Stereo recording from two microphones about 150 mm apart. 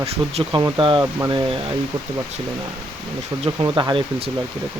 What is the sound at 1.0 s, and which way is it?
Speech, 20° right (ahead or behind).